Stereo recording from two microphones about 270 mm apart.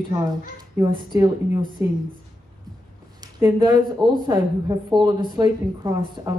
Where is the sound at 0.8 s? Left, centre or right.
Centre.